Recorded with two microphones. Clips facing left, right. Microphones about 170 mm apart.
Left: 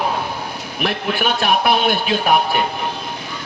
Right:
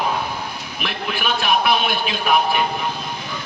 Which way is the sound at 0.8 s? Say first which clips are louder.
Left 5 dB; 50° left (ahead or behind).